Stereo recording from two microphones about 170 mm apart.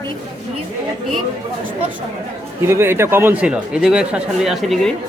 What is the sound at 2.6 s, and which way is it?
Speech, 15° right (ahead or behind).